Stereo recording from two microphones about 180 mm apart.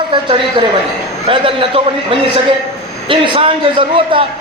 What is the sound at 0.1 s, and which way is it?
A man's voice, 25° right (ahead or behind).